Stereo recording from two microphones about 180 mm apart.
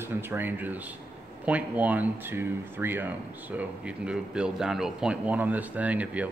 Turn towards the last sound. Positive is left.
turn(degrees=-10)  # may be behind; listen again after turning